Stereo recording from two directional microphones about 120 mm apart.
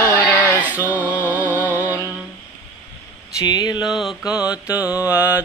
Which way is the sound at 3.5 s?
35° left (ahead or behind).